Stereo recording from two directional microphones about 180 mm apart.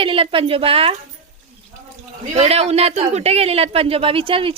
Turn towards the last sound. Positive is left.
turn(degrees=-30)  # may be behind; listen again after turning